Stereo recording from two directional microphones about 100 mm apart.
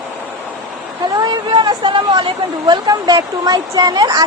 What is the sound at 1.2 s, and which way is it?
Speech, 45° right (ahead or behind).